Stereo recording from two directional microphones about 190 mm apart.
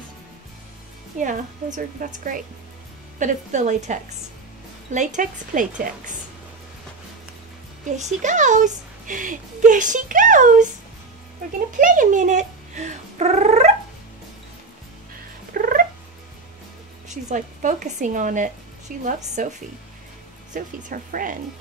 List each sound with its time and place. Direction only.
1.1 s speech: 40° right (ahead or behind)
7.8 s speech: 40° right (ahead or behind)
11.8 s speech: 45° right (ahead or behind)
15.5 s cat: 50° right (ahead or behind)
17.1 s speech: 40° right (ahead or behind)
20.5 s speech: 45° right (ahead or behind)